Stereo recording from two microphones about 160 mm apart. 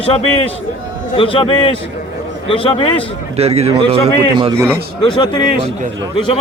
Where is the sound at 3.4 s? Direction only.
40° right (ahead or behind).